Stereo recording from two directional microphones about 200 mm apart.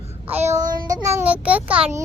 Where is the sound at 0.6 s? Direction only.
45° right (ahead or behind).